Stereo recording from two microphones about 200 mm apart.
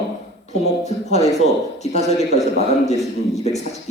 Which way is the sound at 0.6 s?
35° left (ahead or behind).